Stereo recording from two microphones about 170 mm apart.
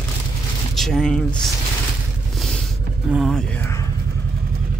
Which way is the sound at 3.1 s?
Centre (ahead or behind).